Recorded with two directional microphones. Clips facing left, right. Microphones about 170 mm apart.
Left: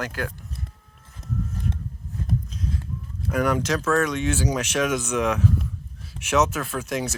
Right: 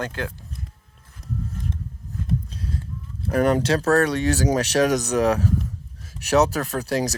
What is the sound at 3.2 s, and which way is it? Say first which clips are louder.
Speech: right 4 dB; 30° right (ahead or behind).